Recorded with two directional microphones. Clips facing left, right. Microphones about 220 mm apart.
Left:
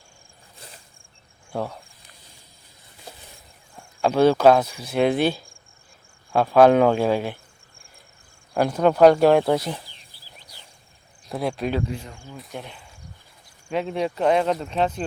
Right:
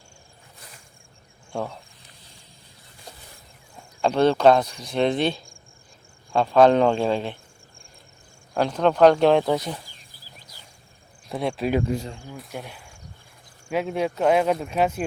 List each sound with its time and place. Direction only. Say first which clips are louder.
1.5 s speech: left 1 dB; 5° left (ahead or behind)
4.0 s speech: left 1 dB; 5° left (ahead or behind)
8.5 s speech: left 2 dB; 10° left (ahead or behind)
9.8 s a sound: right 1 dB; 45° right (ahead or behind)
11.3 s speech: even; centre (ahead or behind)
11.9 s speech: right 6 dB; 40° right (ahead or behind)
12.1 s speech: right 2 dB; 20° right (ahead or behind)
12.4 s speech: even; 5° right (ahead or behind)